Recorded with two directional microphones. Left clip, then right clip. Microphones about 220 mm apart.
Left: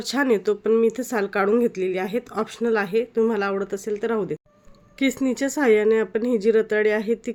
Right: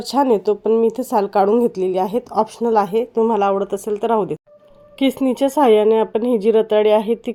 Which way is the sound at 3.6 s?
20° left (ahead or behind).